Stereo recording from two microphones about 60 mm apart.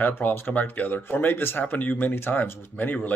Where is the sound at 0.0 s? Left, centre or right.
Left.